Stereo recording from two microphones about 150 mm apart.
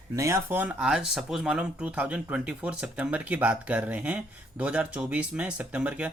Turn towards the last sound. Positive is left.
turn(degrees=-10)  # may be behind; listen again after turning